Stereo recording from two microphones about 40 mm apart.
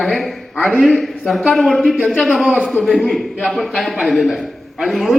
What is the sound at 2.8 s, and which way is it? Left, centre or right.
A man's voice, centre.